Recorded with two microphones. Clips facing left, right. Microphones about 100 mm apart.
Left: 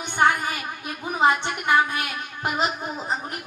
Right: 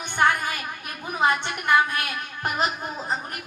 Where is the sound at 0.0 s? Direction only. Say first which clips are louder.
Left 1 dB; 15° left (ahead or behind).